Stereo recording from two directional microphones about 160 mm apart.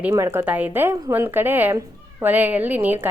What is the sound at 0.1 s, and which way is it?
A woman's voice, 15° right (ahead or behind).